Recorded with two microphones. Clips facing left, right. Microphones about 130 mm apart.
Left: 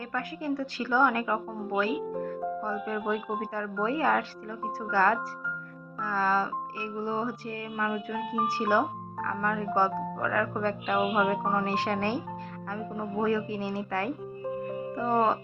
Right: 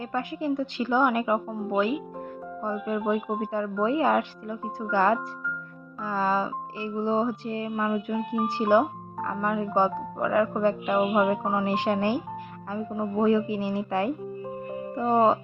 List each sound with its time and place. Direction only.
0.1 s music: 20° right (ahead or behind)